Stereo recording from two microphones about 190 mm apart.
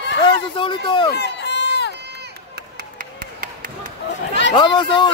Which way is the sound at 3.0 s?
45° right (ahead or behind).